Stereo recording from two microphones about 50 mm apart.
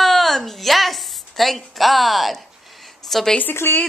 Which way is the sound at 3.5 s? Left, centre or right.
Left.